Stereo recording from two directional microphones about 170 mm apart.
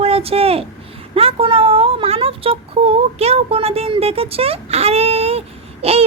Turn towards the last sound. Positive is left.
turn(degrees=-35)  # may be behind; listen again after turning